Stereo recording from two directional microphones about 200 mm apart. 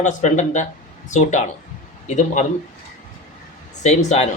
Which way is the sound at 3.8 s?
35° left (ahead or behind).